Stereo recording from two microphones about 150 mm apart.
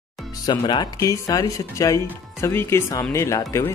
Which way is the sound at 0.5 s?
30° left (ahead or behind).